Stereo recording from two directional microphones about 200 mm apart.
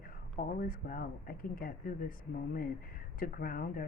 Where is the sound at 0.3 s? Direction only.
45° left (ahead or behind).